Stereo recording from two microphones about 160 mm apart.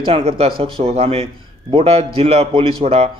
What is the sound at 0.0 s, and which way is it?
Speech, 35° right (ahead or behind).